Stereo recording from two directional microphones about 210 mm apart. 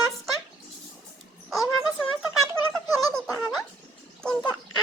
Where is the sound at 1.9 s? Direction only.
Centre (ahead or behind).